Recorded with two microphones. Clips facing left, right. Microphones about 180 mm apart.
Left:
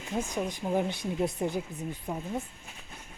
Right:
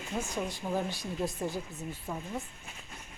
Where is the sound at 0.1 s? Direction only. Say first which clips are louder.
Left 3 dB; 15° left (ahead or behind).